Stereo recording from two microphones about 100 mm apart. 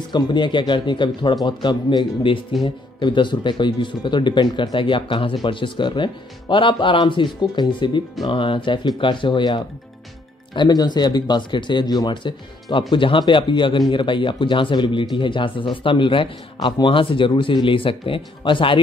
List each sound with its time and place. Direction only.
0.1 s speech: 50° left (ahead or behind)